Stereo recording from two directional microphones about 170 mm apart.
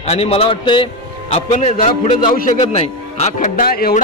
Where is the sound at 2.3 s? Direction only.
45° left (ahead or behind).